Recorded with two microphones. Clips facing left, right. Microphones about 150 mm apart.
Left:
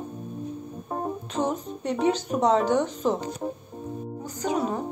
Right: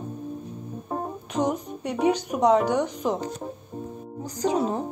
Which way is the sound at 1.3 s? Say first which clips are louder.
Right 4 dB; 15° right (ahead or behind).